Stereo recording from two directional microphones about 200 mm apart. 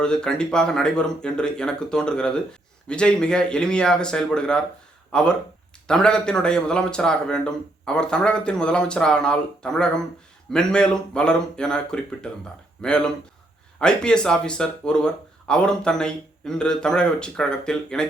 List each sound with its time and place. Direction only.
0.0 s speech: 5° left (ahead or behind)